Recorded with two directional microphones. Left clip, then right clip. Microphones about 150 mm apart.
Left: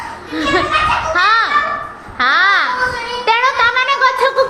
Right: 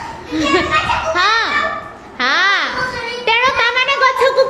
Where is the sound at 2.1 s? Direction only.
20° right (ahead or behind).